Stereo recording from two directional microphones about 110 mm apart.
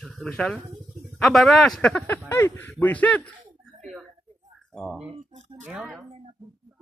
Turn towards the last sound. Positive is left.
turn(degrees=-5)  # may be behind; listen again after turning